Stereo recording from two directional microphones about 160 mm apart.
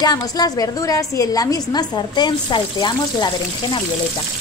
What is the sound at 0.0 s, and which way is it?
A woman's voice, 25° left (ahead or behind).